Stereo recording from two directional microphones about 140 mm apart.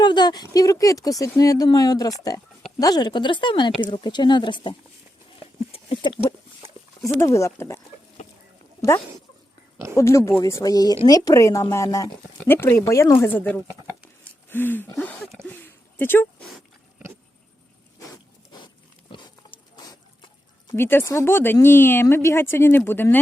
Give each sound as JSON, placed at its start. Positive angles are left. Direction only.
{"t": 0.0, "sound": "a woman's voice", "side_deg": 30}
{"t": 5.7, "sound": "a sound", "side_deg": 35}
{"t": 7.2, "sound": "a woman's voice", "side_deg": 20}
{"t": 9.9, "sound": "a woman's voice", "side_deg": 20}
{"t": 19.7, "sound": "a sound", "side_deg": 25}
{"t": 20.7, "sound": "speech", "side_deg": 15}